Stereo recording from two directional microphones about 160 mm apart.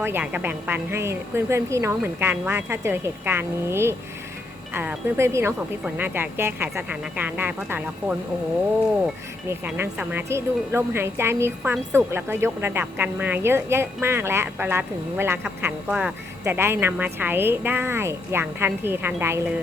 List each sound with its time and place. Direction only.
0.0 s a woman's voice: 10° right (ahead or behind)
9.5 s a woman's voice: 15° right (ahead or behind)